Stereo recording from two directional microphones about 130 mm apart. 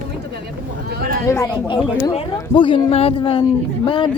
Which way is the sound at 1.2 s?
20° left (ahead or behind).